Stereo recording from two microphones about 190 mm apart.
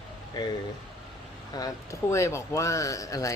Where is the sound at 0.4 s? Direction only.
20° left (ahead or behind).